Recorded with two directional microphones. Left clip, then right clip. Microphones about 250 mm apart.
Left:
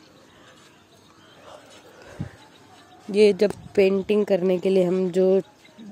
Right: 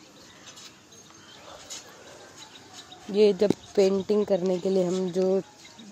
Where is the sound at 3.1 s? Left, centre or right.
Left.